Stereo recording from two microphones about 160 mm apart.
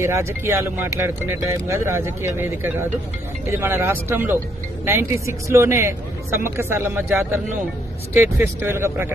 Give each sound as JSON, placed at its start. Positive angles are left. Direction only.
{"t": 0.0, "sound": "speech", "side_deg": -15}